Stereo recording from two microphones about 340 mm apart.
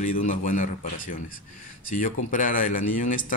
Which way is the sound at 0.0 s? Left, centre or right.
Left.